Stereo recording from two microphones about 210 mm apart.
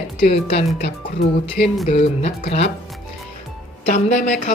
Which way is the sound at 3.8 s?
35° left (ahead or behind).